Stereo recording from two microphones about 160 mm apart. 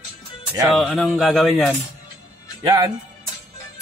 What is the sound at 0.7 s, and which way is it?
A man's voice, centre (ahead or behind).